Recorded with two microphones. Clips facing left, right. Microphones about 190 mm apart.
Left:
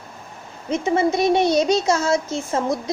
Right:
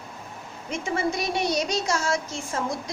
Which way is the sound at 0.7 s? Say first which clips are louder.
Left 8 dB; 25° left (ahead or behind).